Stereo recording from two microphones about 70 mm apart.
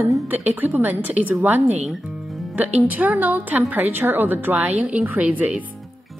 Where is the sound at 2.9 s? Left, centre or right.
Right.